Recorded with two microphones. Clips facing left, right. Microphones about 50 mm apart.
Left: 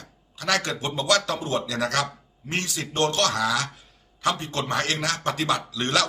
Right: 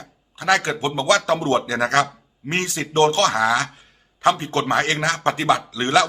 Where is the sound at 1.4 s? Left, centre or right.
Right.